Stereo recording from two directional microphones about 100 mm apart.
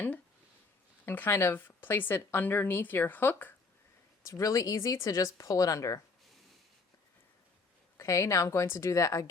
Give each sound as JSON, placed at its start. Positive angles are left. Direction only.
{"t": 1.0, "sound": "a woman's voice", "side_deg": 20}
{"t": 4.3, "sound": "speech", "side_deg": 30}
{"t": 7.9, "sound": "speech", "side_deg": 30}